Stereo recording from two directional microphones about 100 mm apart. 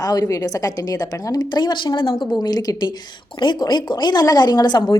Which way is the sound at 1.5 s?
50° left (ahead or behind).